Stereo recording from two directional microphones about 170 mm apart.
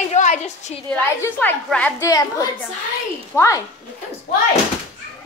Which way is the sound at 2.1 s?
20° left (ahead or behind).